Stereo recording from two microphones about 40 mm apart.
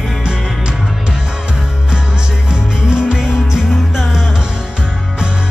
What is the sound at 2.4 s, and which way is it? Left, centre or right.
Music, centre.